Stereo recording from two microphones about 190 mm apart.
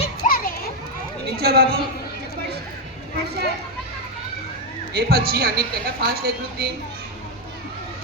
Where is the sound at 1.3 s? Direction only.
55° right (ahead or behind).